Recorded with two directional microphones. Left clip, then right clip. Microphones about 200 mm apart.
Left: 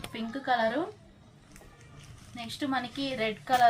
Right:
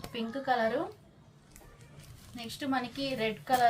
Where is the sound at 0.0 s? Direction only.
10° right (ahead or behind).